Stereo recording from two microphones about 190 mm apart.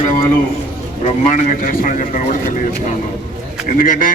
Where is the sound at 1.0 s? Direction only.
40° left (ahead or behind).